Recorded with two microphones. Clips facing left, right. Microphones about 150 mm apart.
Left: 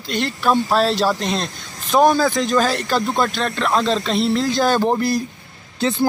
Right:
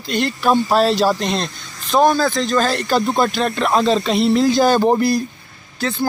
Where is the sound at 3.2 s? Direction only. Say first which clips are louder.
Right 3 dB; 5° right (ahead or behind).